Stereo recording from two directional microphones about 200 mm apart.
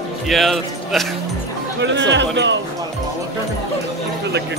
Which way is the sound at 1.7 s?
65° right (ahead or behind).